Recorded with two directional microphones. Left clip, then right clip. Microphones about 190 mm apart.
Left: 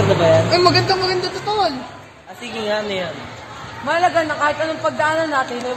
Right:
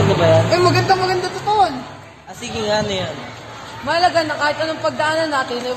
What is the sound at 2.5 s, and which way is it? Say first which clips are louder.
Speech: right 2 dB; 20° left (ahead or behind).